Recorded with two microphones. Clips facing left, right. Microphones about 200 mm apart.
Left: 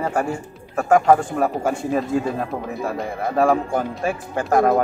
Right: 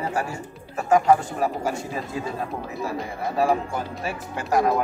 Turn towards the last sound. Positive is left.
turn(degrees=50)  # may be behind; listen again after turning